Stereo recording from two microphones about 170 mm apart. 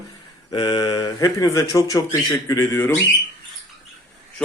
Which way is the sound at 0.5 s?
25° left (ahead or behind).